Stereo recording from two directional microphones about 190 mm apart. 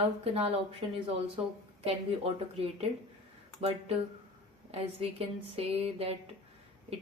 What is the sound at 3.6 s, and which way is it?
Speech, 30° right (ahead or behind).